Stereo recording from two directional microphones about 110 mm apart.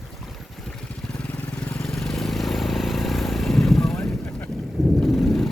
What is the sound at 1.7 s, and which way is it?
Vehicle, 5° left (ahead or behind).